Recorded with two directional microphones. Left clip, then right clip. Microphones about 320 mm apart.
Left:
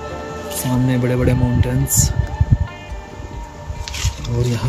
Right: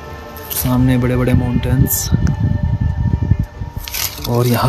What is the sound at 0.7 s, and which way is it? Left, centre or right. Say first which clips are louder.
Speech: right 3 dB; centre.